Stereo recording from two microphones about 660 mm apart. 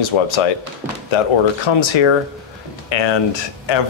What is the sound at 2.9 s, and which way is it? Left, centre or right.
Speech, left.